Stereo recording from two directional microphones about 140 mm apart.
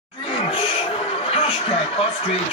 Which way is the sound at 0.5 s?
40° left (ahead or behind).